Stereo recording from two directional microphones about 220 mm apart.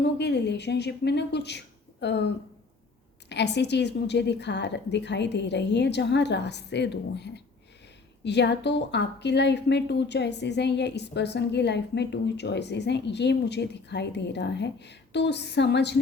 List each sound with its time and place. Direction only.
0.2 s a woman's voice: 50° left (ahead or behind)